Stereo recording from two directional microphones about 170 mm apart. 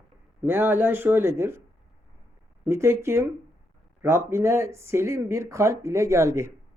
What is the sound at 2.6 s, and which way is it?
Speech, 15° right (ahead or behind).